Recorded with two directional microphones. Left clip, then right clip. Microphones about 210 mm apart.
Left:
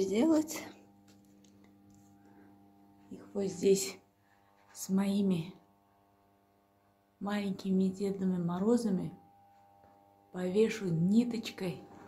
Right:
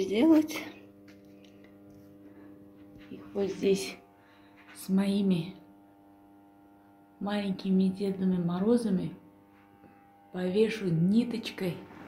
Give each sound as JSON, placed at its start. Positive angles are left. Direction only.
{"t": 0.0, "sound": "speech", "side_deg": 10}
{"t": 3.3, "sound": "speech", "side_deg": 10}
{"t": 7.2, "sound": "speech", "side_deg": 5}
{"t": 10.3, "sound": "speech", "side_deg": 0}